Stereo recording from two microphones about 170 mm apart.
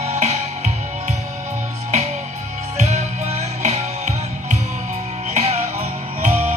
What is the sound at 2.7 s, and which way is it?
Music, 40° right (ahead or behind).